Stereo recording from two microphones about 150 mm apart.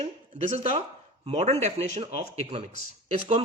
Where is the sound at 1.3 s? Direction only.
45° right (ahead or behind).